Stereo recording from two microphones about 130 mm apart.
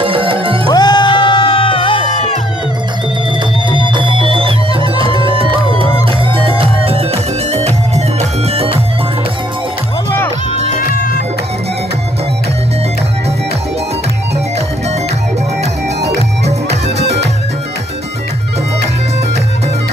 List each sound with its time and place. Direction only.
0.0 s music: 45° right (ahead or behind)
0.7 s music: 35° left (ahead or behind)
3.9 s music: 40° right (ahead or behind); by 8.6 s 55° right (ahead or behind)